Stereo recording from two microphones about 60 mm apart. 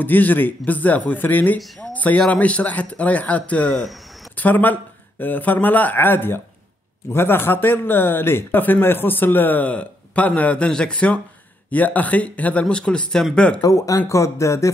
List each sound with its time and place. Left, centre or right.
0.0 s speech: left; by 13.6 s centre
13.6 s speech: left